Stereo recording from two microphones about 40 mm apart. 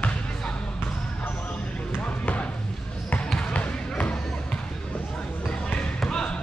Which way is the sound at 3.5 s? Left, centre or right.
Left.